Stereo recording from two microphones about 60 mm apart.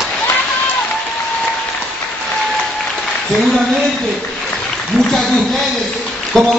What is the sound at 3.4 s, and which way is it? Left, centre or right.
Speech, centre.